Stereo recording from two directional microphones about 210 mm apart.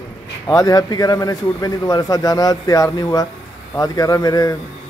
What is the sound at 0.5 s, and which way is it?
A man's voice, 15° left (ahead or behind).